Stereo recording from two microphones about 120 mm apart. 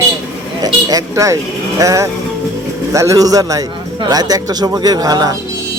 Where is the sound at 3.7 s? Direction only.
40° right (ahead or behind).